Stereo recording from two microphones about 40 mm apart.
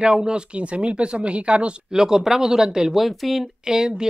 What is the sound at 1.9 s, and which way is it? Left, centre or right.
Speech, centre.